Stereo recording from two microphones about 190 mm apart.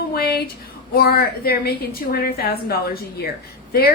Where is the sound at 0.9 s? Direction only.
55° left (ahead or behind).